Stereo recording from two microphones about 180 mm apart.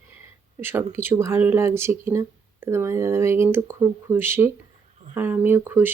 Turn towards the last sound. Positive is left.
turn(degrees=-10)  # may be behind; listen again after turning